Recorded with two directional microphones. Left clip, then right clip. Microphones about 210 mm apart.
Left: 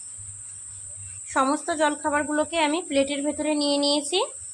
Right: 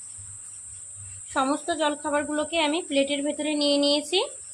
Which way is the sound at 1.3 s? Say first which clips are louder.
Left 2 dB; 20° left (ahead or behind).